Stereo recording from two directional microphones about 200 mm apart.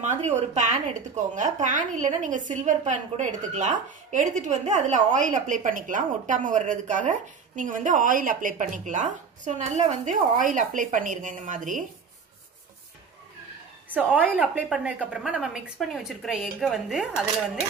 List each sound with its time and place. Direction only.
0.0 s speech: 35° right (ahead or behind)
13.8 s a woman's voice: 10° right (ahead or behind)